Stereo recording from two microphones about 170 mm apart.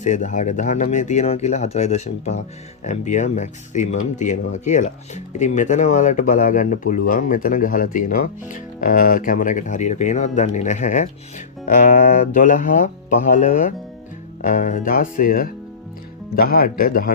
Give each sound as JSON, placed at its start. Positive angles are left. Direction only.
{"t": 0.0, "sound": "speech", "side_deg": 45}